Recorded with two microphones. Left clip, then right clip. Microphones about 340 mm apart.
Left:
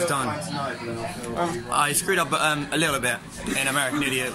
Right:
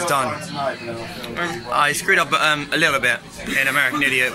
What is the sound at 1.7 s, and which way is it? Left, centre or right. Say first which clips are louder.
A man's voice: right 7 dB; centre.